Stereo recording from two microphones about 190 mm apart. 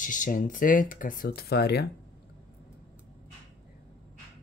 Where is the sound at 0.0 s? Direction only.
45° left (ahead or behind); by 1.9 s 60° left (ahead or behind).